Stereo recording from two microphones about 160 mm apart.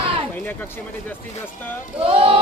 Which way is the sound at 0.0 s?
35° right (ahead or behind).